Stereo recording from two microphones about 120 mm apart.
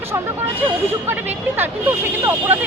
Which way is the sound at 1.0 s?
15° right (ahead or behind).